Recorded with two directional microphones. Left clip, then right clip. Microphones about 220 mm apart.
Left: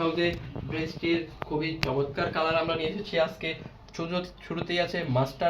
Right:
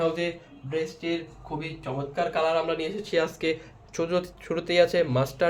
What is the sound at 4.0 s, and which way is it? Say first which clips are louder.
Speech: right 5 dB; 45° right (ahead or behind).